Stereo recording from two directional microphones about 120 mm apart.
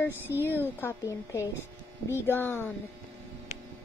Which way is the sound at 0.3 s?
30° left (ahead or behind).